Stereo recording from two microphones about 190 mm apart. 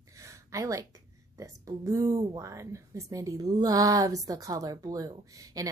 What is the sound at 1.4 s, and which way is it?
Speech, 15° right (ahead or behind).